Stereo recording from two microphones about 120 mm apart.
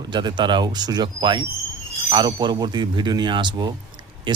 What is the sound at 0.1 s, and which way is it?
Speech, 40° right (ahead or behind).